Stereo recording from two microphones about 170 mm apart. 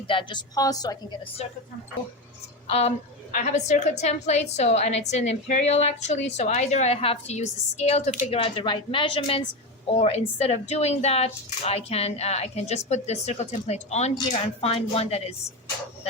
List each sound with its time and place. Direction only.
0.1 s a woman's voice: 30° left (ahead or behind)
2.6 s a woman's voice: 40° left (ahead or behind)